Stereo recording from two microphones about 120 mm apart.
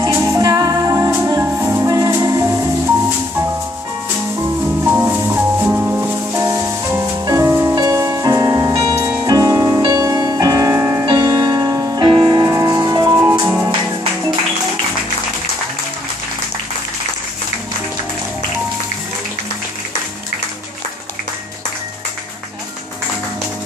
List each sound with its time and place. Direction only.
0.1 s music: 30° right (ahead or behind)
4.6 s music: 15° right (ahead or behind)
6.4 s music: 25° right (ahead or behind)